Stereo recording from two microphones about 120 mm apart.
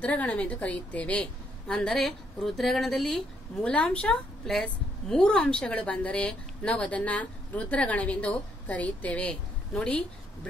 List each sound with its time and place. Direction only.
0.0 s a woman's voice: 10° left (ahead or behind)